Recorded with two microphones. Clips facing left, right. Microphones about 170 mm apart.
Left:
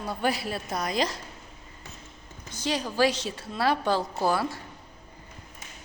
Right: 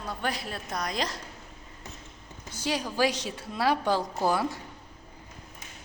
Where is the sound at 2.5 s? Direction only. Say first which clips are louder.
Left 2 dB; 10° right (ahead or behind).